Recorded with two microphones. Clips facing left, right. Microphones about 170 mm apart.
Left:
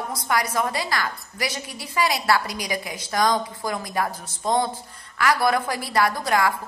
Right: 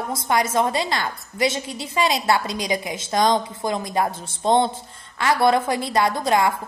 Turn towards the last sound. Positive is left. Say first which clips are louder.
# right 2 dB
turn(degrees=-20)  # may be behind; listen again after turning